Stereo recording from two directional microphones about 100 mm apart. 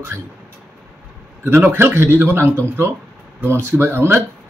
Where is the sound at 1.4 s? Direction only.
25° right (ahead or behind).